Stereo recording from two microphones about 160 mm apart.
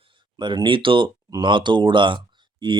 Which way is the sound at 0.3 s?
30° right (ahead or behind).